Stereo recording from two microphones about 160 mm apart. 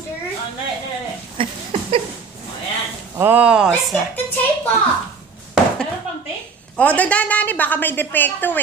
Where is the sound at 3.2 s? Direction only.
10° right (ahead or behind).